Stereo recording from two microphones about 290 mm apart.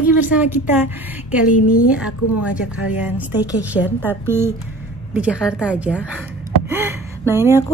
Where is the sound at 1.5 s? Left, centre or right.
Left.